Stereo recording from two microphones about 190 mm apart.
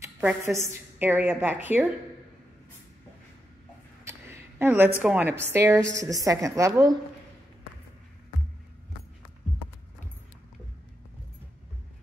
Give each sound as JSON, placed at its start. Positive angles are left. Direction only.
{"t": 0.0, "sound": "a woman's voice", "side_deg": -5}
{"t": 4.0, "sound": "a sound", "side_deg": -15}
{"t": 5.4, "sound": "a woman's voice", "side_deg": -15}